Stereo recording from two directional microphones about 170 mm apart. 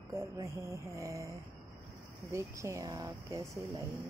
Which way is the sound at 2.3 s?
15° right (ahead or behind).